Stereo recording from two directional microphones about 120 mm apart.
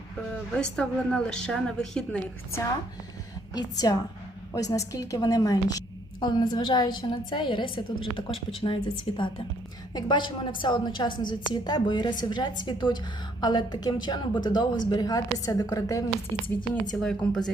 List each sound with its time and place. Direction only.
0.3 s a woman's voice: 5° left (ahead or behind)
3.5 s a woman's voice: 30° left (ahead or behind)
16.9 s speech: 5° left (ahead or behind)